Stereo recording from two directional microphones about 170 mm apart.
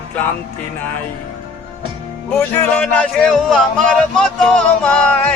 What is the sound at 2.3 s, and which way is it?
Speech, 10° left (ahead or behind).